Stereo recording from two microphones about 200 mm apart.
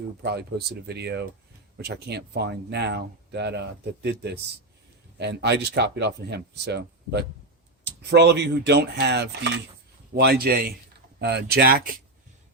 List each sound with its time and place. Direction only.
0.2 s a man's voice: 55° right (ahead or behind)